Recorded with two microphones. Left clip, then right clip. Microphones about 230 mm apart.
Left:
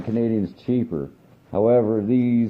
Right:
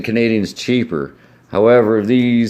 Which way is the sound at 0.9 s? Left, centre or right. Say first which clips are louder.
Right 7 dB; right.